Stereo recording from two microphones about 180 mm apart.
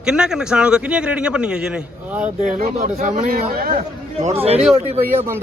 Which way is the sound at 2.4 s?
45° right (ahead or behind).